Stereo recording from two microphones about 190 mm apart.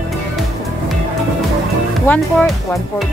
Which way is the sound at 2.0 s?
10° left (ahead or behind).